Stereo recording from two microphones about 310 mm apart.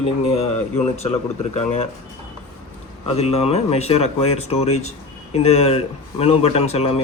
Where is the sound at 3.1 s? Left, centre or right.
Centre.